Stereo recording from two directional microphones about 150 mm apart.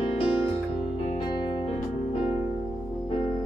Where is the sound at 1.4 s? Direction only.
30° left (ahead or behind).